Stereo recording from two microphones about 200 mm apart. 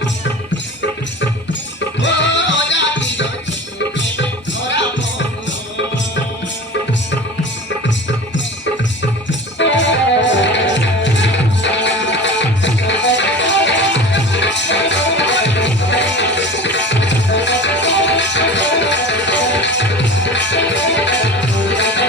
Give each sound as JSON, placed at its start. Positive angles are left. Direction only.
{"t": 2.0, "sound": "music", "side_deg": 65}
{"t": 9.6, "sound": "music", "side_deg": 65}